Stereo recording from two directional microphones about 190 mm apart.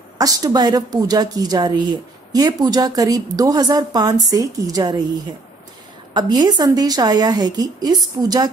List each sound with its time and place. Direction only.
0.2 s a woman's voice: 20° right (ahead or behind)
6.1 s a woman's voice: 20° right (ahead or behind)